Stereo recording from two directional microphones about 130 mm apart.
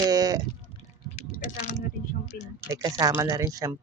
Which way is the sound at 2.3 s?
90° left.